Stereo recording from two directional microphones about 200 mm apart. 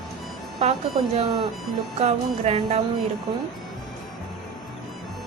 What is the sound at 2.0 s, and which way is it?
Music, 35° right (ahead or behind).